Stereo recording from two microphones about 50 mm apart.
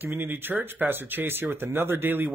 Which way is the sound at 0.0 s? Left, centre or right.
Right.